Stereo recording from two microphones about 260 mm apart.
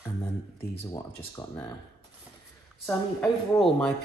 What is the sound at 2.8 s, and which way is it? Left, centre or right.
Speech, centre.